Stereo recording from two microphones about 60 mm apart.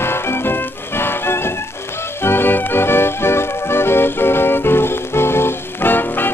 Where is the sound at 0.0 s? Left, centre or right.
Left.